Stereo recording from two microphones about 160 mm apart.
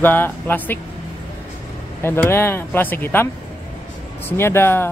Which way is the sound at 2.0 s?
15° left (ahead or behind).